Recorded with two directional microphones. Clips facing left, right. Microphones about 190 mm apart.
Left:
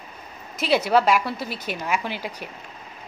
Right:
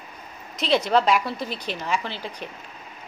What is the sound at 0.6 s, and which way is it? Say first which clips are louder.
Speech: left 1 dB; 5° left (ahead or behind).